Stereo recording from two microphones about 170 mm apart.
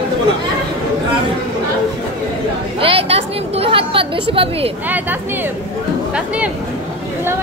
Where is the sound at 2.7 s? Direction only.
35° right (ahead or behind).